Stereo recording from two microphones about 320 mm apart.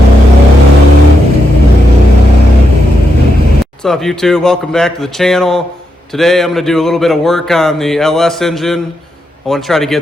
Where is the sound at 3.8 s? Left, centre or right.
Centre.